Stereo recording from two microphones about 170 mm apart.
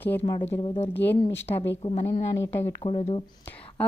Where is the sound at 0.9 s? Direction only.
10° left (ahead or behind).